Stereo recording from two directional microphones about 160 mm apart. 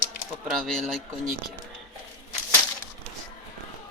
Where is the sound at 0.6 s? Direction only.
5° left (ahead or behind).